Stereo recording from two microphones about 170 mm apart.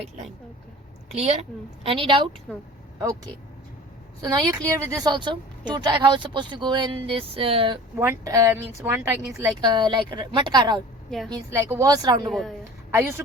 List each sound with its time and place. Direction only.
1.1 s a woman's voice: 40° right (ahead or behind)
4.2 s a woman's voice: 20° right (ahead or behind)
7.9 s a woman's voice: 15° right (ahead or behind)
12.3 s a woman's voice: centre (ahead or behind)
12.9 s a woman's voice: 15° right (ahead or behind)